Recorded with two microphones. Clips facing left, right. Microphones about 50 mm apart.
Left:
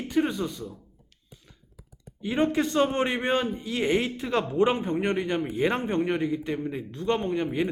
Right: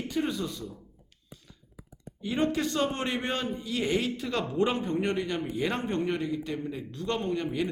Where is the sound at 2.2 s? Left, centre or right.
Left.